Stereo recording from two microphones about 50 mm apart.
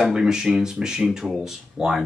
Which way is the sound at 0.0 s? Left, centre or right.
Centre.